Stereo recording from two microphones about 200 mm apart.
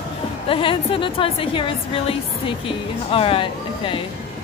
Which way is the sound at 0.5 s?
25° left (ahead or behind).